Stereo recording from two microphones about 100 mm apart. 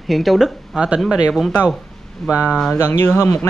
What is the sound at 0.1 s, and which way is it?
Speech, centre (ahead or behind).